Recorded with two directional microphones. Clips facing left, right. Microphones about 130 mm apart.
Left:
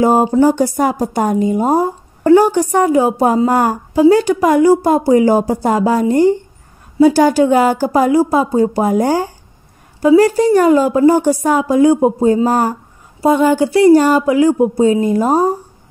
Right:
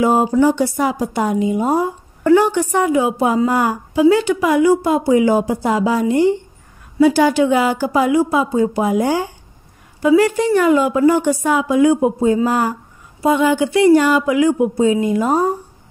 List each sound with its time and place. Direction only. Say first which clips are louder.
0.0 s speech: left 3 dB; 40° left (ahead or behind)